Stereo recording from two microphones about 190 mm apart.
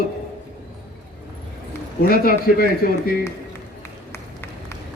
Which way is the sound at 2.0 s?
50° left (ahead or behind).